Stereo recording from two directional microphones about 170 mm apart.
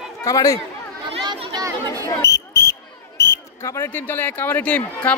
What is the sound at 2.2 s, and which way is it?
Basketball bounce, 15° left (ahead or behind).